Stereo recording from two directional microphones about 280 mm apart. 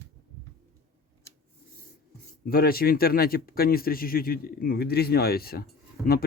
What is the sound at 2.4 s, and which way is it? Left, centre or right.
Speech, left.